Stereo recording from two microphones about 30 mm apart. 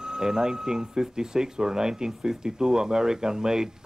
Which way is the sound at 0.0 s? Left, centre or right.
Centre.